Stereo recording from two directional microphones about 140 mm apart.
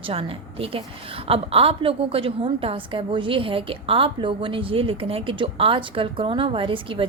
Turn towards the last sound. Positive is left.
turn(degrees=-40)  # may be behind; listen again after turning